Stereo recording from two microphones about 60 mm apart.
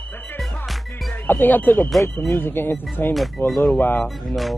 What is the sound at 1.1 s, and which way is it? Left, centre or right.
Speech, left.